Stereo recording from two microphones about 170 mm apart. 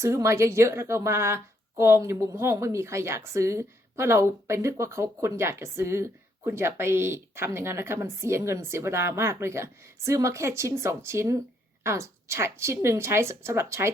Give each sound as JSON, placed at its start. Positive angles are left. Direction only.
{"t": 0.0, "sound": "a woman's voice", "side_deg": -15}